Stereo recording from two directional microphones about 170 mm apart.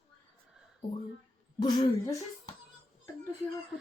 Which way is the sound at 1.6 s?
25° left (ahead or behind).